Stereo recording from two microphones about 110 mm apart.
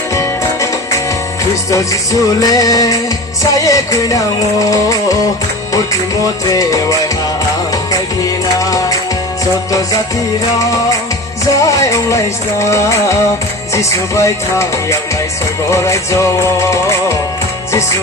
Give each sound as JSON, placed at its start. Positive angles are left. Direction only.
{"t": 0.1, "sound": "music", "side_deg": 30}
{"t": 2.4, "sound": "music", "side_deg": 35}
{"t": 6.5, "sound": "music", "side_deg": 30}
{"t": 8.5, "sound": "music", "side_deg": 30}
{"t": 11.5, "sound": "music", "side_deg": 30}